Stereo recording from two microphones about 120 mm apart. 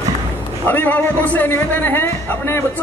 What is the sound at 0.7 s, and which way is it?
A man's voice, 15° left (ahead or behind).